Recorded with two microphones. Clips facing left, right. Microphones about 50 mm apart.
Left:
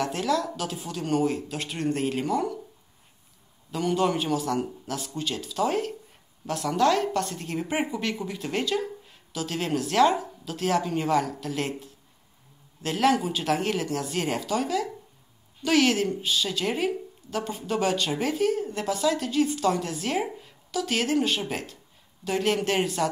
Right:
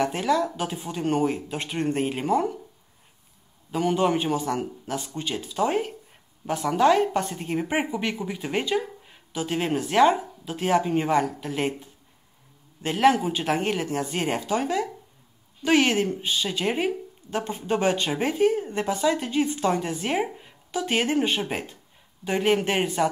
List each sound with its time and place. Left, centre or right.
0.0 s speech: centre
3.7 s speech: centre
12.8 s speech: centre